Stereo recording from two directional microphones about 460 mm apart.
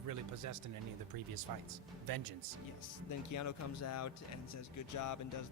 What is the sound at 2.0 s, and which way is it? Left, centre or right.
Speech, right.